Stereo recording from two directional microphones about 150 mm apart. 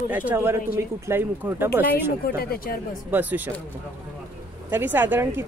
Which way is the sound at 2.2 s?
90° left.